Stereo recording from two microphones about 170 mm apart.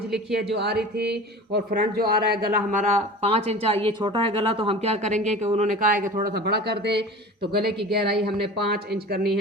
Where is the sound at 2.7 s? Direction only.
45° right (ahead or behind).